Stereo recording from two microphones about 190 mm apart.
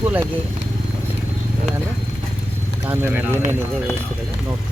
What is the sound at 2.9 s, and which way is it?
Speech, 10° right (ahead or behind).